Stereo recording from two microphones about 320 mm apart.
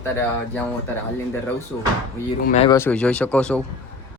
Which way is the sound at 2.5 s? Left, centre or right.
Centre.